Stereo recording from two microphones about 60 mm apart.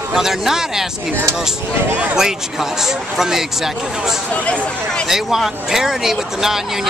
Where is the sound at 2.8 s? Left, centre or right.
Centre.